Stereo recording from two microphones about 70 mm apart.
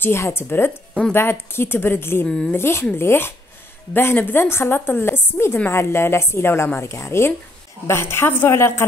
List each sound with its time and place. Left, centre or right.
0.0 s a woman's voice: left
2.2 s a woman's voice: centre
2.5 s a woman's voice: left